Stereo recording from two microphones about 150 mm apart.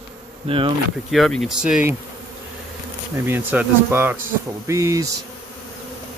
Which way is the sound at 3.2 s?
15° right (ahead or behind).